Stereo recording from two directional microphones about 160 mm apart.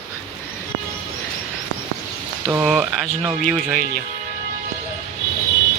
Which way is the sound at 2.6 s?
5° right (ahead or behind).